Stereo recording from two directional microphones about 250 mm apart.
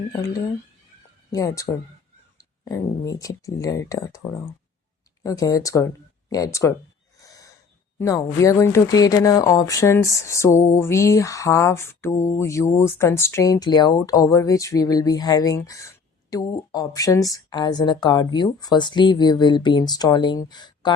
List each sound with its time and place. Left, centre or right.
1.3 s speech: centre
7.2 s gasp: centre
7.9 s speech: centre